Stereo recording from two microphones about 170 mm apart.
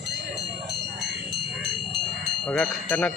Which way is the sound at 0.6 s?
75° right (ahead or behind).